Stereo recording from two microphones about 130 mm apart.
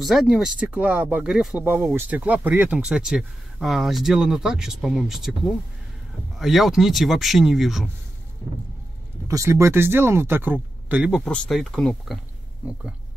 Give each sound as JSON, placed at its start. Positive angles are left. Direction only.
{"t": 0.0, "sound": "speech", "side_deg": 0}
{"t": 1.6, "sound": "speech", "side_deg": -15}
{"t": 6.3, "sound": "speech", "side_deg": 0}
{"t": 9.3, "sound": "speech", "side_deg": -20}
{"t": 11.2, "sound": "speech", "side_deg": 5}